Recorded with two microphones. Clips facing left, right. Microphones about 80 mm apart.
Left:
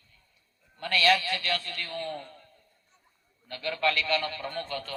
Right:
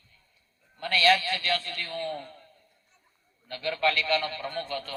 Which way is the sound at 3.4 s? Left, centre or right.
Right.